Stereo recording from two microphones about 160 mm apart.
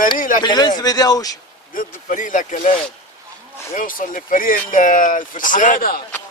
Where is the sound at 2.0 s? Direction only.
55° left (ahead or behind).